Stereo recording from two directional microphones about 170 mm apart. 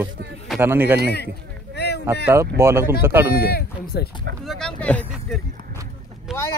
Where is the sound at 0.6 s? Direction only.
10° right (ahead or behind).